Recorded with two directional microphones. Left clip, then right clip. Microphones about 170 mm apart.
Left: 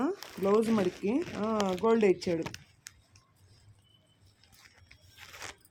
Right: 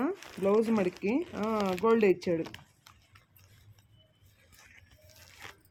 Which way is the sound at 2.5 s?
50° left (ahead or behind).